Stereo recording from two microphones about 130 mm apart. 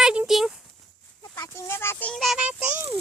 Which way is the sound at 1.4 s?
20° left (ahead or behind).